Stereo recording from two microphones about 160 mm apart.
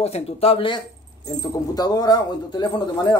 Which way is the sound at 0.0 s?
40° left (ahead or behind).